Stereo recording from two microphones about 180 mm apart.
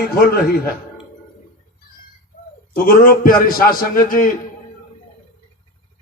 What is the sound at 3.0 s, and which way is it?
A man's voice, 50° left (ahead or behind).